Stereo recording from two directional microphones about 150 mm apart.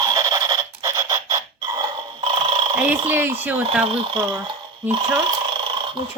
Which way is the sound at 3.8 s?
35° right (ahead or behind).